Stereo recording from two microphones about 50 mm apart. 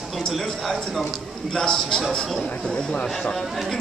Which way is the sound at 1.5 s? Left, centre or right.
Centre.